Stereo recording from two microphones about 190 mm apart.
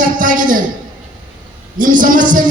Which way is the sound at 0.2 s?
45° right (ahead or behind).